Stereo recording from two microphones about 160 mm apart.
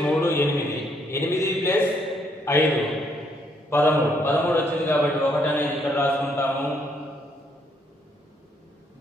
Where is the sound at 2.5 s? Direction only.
15° left (ahead or behind).